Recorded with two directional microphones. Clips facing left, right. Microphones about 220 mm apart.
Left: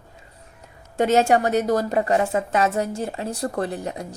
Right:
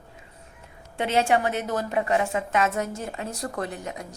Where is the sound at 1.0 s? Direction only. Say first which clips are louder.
Left 5 dB; 45° left (ahead or behind).